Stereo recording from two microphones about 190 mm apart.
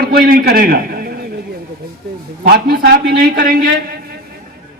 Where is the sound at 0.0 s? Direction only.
50° right (ahead or behind).